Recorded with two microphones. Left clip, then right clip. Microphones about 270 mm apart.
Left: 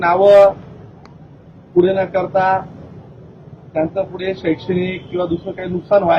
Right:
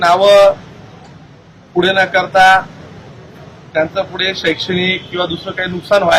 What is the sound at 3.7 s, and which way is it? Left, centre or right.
Speech, centre.